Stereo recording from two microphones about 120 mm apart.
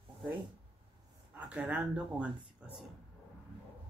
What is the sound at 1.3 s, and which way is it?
Speech, 10° right (ahead or behind).